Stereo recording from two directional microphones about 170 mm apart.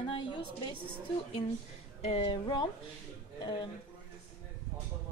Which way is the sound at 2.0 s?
35° left (ahead or behind).